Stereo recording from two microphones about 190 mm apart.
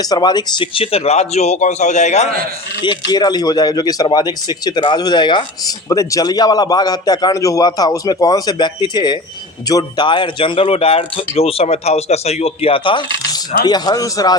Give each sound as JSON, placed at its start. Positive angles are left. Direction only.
{"t": 0.0, "sound": "speech", "side_deg": 20}
{"t": 2.8, "sound": "speech", "side_deg": 20}